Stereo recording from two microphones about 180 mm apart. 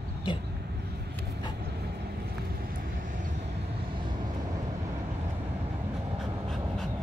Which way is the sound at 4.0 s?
25° right (ahead or behind).